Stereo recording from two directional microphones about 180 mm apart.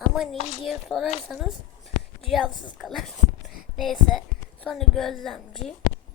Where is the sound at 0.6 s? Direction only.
Centre (ahead or behind).